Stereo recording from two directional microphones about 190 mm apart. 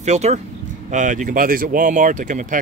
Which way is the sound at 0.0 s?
35° right (ahead or behind).